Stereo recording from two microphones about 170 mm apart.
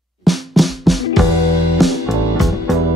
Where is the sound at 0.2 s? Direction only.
Centre (ahead or behind).